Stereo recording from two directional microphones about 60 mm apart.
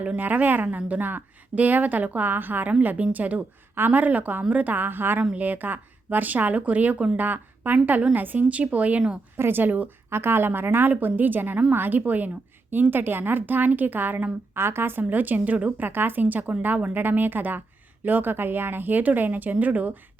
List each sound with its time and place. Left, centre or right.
0.2 s a woman's voice: right
9.4 s a woman's voice: right
10.1 s a woman's voice: right